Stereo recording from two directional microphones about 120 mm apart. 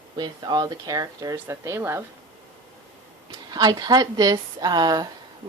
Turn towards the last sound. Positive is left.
turn(degrees=-35)  # may be behind; listen again after turning